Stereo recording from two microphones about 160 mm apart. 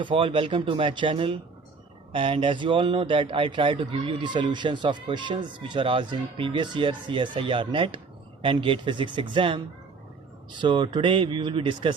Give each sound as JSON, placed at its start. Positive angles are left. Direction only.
{"t": 0.0, "sound": "speech", "side_deg": -30}